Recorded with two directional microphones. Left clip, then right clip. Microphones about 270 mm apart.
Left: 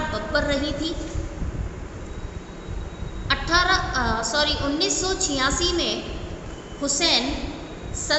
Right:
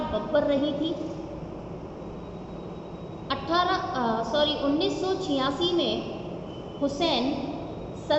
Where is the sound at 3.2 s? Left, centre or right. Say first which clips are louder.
Left 5 dB; left.